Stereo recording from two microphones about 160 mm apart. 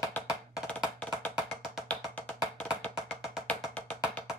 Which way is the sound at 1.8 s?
10° left (ahead or behind).